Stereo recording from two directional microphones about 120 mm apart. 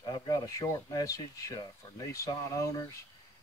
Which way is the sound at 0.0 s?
35° left (ahead or behind).